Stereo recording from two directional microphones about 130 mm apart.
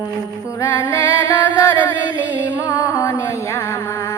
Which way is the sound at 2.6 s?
25° left (ahead or behind).